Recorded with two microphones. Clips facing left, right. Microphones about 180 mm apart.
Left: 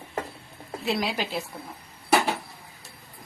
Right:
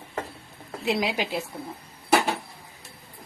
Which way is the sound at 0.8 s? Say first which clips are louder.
Right 2 dB; 15° right (ahead or behind).